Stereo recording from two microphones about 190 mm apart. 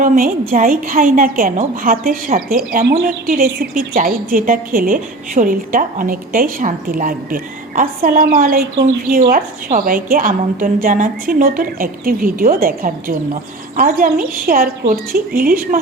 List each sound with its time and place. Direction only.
0.0 s a woman's voice: 45° right (ahead or behind)